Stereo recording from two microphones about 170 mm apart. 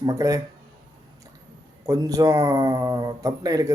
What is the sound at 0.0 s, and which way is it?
Speech, 20° right (ahead or behind).